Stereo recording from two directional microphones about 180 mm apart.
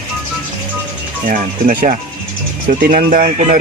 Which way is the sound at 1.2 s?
45° right (ahead or behind).